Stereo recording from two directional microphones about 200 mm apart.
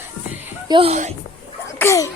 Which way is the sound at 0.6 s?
25° right (ahead or behind).